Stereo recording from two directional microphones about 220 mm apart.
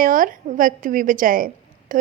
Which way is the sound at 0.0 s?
40° right (ahead or behind).